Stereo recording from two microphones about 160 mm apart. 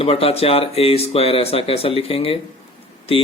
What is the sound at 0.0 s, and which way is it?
Speech, 35° left (ahead or behind).